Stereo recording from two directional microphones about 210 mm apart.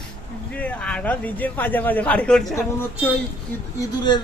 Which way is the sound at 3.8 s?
20° left (ahead or behind).